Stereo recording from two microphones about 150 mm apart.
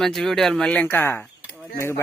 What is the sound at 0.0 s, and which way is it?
Speech, centre (ahead or behind).